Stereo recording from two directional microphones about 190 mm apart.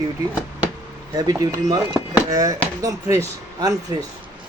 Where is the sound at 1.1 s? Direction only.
20° right (ahead or behind).